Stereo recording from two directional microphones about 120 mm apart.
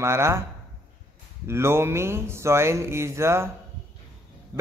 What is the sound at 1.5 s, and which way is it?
Speech, 20° right (ahead or behind).